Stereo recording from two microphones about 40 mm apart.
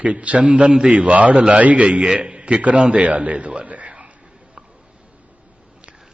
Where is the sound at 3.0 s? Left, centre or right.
Right.